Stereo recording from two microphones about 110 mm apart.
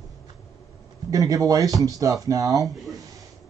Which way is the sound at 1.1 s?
30° right (ahead or behind).